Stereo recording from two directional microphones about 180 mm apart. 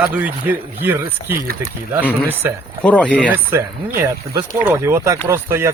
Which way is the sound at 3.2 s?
15° right (ahead or behind).